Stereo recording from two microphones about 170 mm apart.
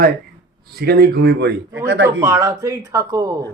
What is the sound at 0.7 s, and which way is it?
Speech, 70° right (ahead or behind).